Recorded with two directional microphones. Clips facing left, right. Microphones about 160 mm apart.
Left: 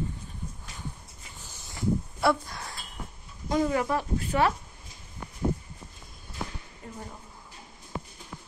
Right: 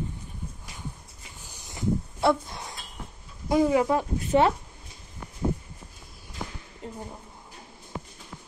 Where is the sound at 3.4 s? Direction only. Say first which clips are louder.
Right 4 dB; 15° right (ahead or behind).